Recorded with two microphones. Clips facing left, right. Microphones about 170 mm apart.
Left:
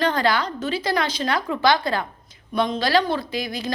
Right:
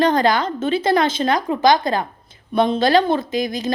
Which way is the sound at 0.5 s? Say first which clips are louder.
Right 6 dB; 25° right (ahead or behind).